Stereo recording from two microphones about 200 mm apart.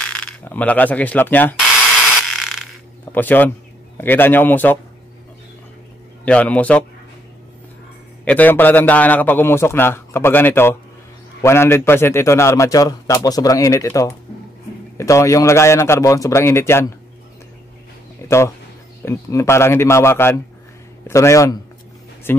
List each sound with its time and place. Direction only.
0.0 s speech: 5° left (ahead or behind)
2.2 s a sound: centre (ahead or behind)
3.1 s a man's voice: 10° left (ahead or behind)
6.2 s a man's voice: 5° left (ahead or behind)
8.3 s a man's voice: 10° left (ahead or behind)
18.2 s a sound: 15° left (ahead or behind)
19.0 s a man's voice: 15° left (ahead or behind)